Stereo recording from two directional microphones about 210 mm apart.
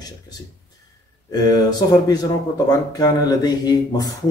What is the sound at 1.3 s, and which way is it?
Speech, 20° left (ahead or behind).